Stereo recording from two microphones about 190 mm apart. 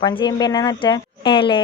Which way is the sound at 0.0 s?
25° left (ahead or behind).